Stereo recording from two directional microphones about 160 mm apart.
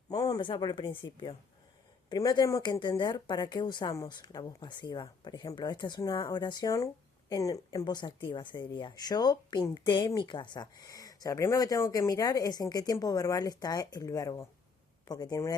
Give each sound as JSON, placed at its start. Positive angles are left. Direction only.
{"t": 0.1, "sound": "speech", "side_deg": 25}